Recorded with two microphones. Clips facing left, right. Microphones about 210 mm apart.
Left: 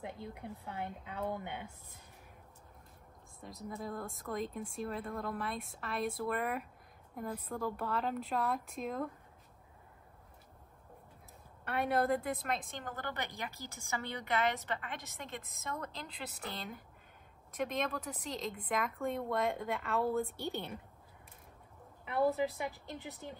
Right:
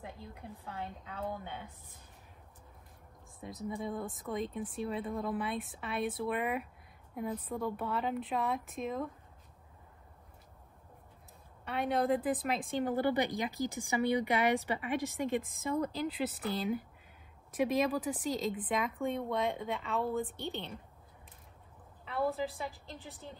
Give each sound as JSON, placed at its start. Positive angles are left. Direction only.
{"t": 0.7, "sound": "a woman's voice", "side_deg": 15}
{"t": 3.3, "sound": "speech", "side_deg": 0}
{"t": 11.6, "sound": "a woman's voice", "side_deg": 0}
{"t": 22.0, "sound": "a woman's voice", "side_deg": 15}